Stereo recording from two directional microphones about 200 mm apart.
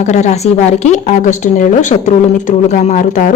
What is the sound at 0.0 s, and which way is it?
A woman's voice, 35° left (ahead or behind).